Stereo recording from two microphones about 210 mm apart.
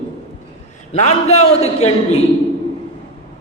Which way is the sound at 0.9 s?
30° left (ahead or behind).